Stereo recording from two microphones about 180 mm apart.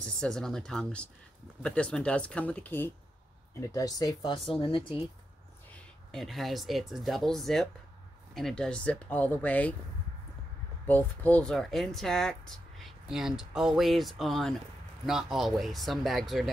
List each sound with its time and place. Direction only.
0.0 s speech: 5° left (ahead or behind); by 4.9 s 30° left (ahead or behind)
6.1 s speech: centre (ahead or behind)
10.9 s speech: 10° left (ahead or behind)